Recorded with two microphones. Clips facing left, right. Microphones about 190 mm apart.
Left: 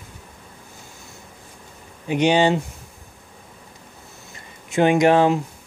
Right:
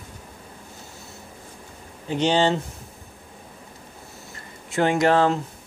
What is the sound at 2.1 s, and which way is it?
Speech, 15° left (ahead or behind).